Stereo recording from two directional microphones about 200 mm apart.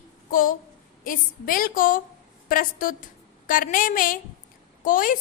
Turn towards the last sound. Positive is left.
turn(degrees=45)  # may be behind; listen again after turning